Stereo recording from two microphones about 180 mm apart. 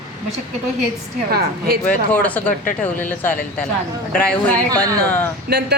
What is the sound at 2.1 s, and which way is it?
Speech, 10° left (ahead or behind).